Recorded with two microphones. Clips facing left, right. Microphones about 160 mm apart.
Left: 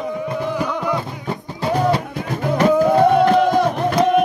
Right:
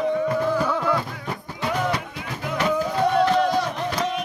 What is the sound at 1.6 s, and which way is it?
Music, 35° left (ahead or behind).